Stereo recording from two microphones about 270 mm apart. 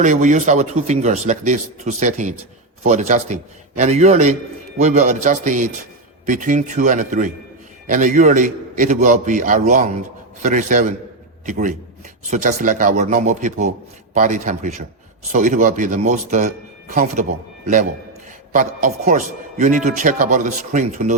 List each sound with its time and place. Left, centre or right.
0.0 s speech: right
18.5 s speech: right